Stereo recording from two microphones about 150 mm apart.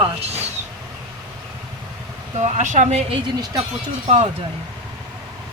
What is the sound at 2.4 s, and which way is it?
Speech, 55° right (ahead or behind).